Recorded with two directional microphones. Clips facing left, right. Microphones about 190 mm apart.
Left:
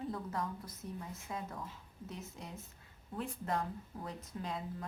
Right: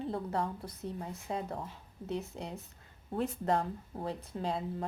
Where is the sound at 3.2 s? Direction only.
35° right (ahead or behind).